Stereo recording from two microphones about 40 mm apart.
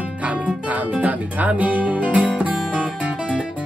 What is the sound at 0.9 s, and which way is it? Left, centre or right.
Speech, right.